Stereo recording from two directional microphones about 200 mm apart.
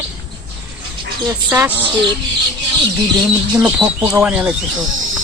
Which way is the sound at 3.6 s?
5° right (ahead or behind).